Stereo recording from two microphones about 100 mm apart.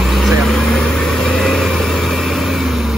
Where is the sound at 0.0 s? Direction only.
Centre (ahead or behind).